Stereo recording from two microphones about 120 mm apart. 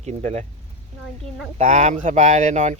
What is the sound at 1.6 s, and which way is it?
Speech, 85° right.